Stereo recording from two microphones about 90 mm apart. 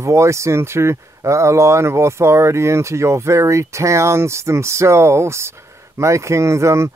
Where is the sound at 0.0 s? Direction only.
35° right (ahead or behind).